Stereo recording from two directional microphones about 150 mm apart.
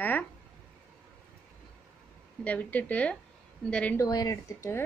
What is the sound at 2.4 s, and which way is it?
Speech, 10° left (ahead or behind).